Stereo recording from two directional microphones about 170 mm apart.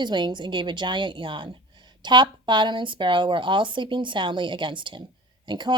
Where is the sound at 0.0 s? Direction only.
25° right (ahead or behind).